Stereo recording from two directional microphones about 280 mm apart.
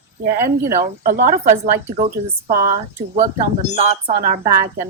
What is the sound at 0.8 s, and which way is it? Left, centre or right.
Speech, right.